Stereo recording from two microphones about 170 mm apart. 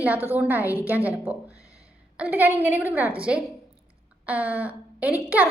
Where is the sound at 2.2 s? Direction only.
10° right (ahead or behind).